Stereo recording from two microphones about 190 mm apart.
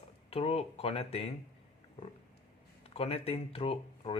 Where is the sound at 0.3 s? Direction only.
30° left (ahead or behind).